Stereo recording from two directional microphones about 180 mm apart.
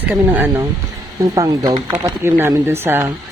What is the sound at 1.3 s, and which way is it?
Speech, 20° right (ahead or behind).